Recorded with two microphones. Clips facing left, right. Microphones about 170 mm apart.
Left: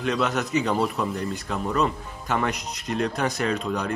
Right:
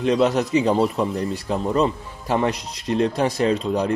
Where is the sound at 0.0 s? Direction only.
30° right (ahead or behind).